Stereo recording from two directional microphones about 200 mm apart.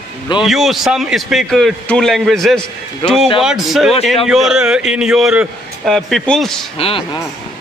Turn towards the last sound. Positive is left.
turn(degrees=30)  # may be behind; listen again after turning